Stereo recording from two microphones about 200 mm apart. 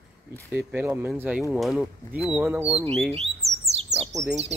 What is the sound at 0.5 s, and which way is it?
Speech, 5° right (ahead or behind).